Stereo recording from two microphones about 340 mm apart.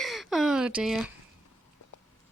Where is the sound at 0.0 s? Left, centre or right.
Centre.